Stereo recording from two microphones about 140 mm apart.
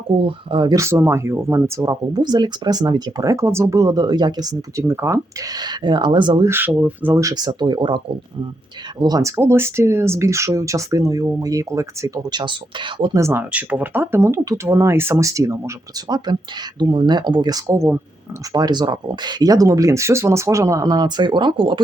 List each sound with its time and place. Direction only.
0.2 s speech: 40° right (ahead or behind)
0.8 s speech: 20° right (ahead or behind)
6.5 s speech: 15° right (ahead or behind); by 13.1 s 35° right (ahead or behind)
13.1 s speech: 20° right (ahead or behind)
18.5 s speech: 30° right (ahead or behind)